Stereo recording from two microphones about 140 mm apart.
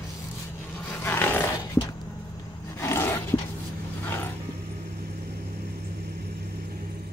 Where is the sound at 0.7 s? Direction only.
15° left (ahead or behind).